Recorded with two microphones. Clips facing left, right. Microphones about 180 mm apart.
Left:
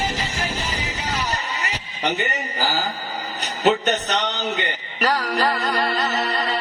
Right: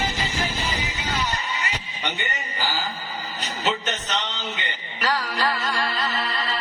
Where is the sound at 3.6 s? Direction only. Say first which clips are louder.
Left 8 dB; 50° left (ahead or behind).